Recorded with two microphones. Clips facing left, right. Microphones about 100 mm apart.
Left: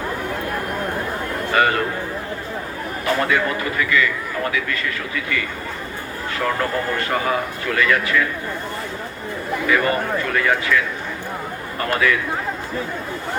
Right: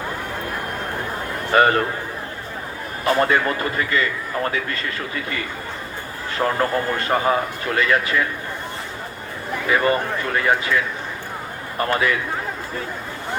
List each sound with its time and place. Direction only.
1.5 s a man's voice: 35° right (ahead or behind)
3.2 s a man's voice: 35° right (ahead or behind)
6.4 s a man's voice: 30° right (ahead or behind)
9.6 s a man's voice: 25° right (ahead or behind)
11.8 s a man's voice: 25° right (ahead or behind)